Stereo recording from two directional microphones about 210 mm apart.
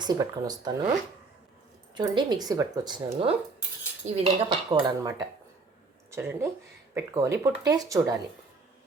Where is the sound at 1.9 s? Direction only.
20° right (ahead or behind).